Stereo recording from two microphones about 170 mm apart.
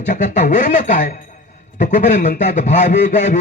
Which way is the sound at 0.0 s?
45° left (ahead or behind).